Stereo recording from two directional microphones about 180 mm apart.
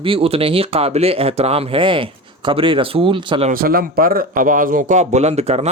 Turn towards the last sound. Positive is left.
turn(degrees=-35)  # may be behind; listen again after turning